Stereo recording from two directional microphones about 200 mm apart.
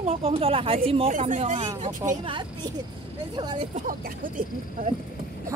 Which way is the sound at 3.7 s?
45° right (ahead or behind).